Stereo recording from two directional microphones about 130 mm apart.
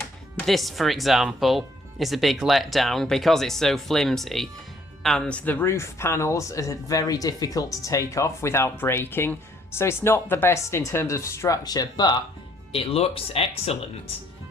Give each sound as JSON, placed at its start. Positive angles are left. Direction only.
{"t": 0.3, "sound": "speech", "side_deg": 0}
{"t": 12.7, "sound": "speech", "side_deg": 50}